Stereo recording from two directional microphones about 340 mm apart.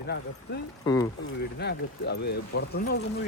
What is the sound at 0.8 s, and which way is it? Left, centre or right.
Speech, centre.